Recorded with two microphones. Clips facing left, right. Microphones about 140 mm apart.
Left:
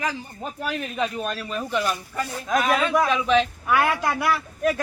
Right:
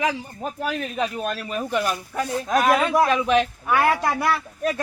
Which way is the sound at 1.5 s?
10° right (ahead or behind).